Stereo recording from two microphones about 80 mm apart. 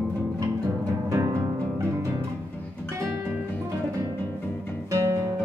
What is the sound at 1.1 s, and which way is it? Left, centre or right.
Music, right.